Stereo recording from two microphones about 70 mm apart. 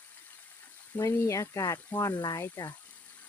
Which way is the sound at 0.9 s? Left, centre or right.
Left.